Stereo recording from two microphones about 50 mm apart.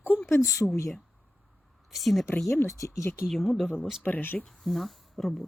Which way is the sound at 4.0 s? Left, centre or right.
Left.